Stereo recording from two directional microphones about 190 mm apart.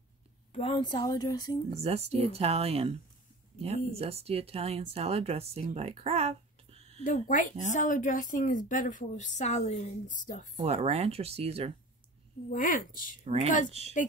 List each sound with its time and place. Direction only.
0.5 s speech: 30° left (ahead or behind)
1.8 s speech: 35° right (ahead or behind)
7.0 s a woman's voice: 40° left (ahead or behind)
10.5 s speech: 35° right (ahead or behind)
12.4 s a woman's voice: 45° left (ahead or behind)
13.2 s speech: 35° right (ahead or behind)